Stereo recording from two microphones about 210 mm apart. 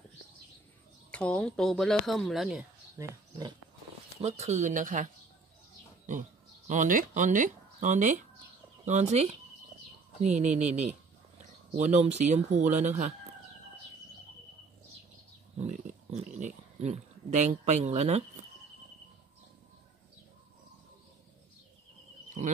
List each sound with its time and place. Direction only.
1.1 s speech: 5° left (ahead or behind)
3.0 s speech: 20° right (ahead or behind)
4.2 s speech: 30° right (ahead or behind)
6.7 s speech: 40° right (ahead or behind)
15.6 s a sound: 35° right (ahead or behind)